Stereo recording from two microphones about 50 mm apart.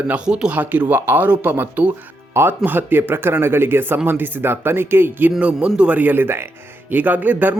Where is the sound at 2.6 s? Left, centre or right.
Right.